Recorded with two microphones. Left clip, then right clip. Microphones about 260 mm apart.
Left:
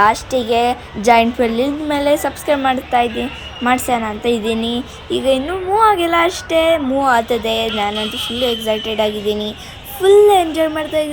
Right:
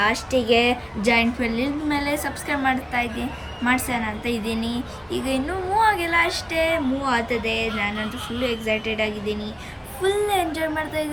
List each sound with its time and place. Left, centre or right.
0.0 s a woman's voice: centre